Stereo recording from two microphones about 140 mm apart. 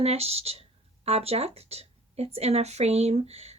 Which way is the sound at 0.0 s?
45° right (ahead or behind).